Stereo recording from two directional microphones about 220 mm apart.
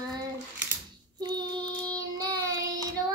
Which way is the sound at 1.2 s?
20° right (ahead or behind).